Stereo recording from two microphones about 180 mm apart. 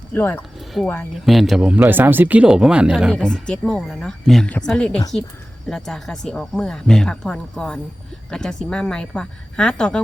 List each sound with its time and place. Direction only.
0.1 s speech: 10° left (ahead or behind)